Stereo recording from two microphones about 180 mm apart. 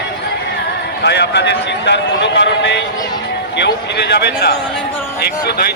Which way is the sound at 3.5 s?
70° left (ahead or behind).